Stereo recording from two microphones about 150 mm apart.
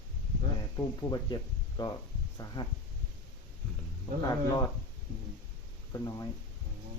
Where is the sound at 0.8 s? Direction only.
25° left (ahead or behind).